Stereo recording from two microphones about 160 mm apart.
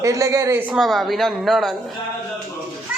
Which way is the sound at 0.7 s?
Centre (ahead or behind).